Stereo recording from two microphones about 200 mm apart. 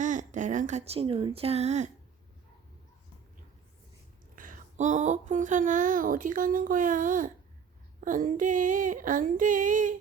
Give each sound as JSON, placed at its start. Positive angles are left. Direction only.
{"t": 0.0, "sound": "speech", "side_deg": -40}
{"t": 4.4, "sound": "speech", "side_deg": -40}